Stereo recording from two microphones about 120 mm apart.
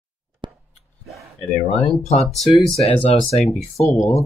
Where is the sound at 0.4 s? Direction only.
40° right (ahead or behind).